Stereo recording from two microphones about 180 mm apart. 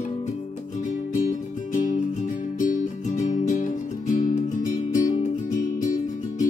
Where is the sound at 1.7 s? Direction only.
45° left (ahead or behind).